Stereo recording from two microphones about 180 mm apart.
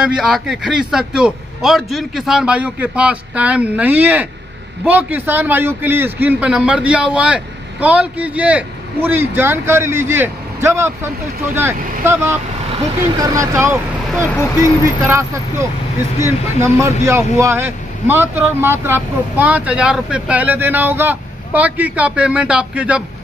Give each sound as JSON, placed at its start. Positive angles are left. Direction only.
{"t": 0.0, "sound": "speech", "side_deg": -5}